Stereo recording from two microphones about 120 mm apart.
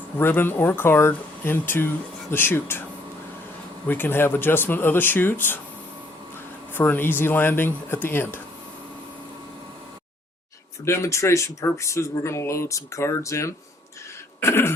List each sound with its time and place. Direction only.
0.2 s speech: 20° left (ahead or behind)
3.8 s speech: 15° left (ahead or behind)
6.7 s speech: 15° left (ahead or behind)
10.8 s speech: 25° left (ahead or behind)